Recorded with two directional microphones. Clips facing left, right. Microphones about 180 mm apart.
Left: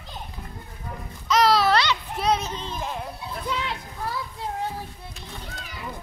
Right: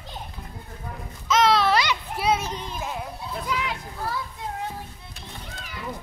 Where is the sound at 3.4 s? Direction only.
30° left (ahead or behind).